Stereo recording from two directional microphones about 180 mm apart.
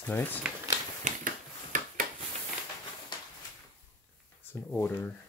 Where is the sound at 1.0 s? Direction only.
45° right (ahead or behind).